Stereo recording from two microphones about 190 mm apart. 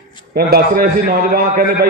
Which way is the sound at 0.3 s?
50° right (ahead or behind).